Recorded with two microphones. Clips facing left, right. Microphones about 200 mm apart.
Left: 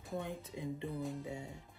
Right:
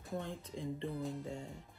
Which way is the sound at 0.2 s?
10° left (ahead or behind).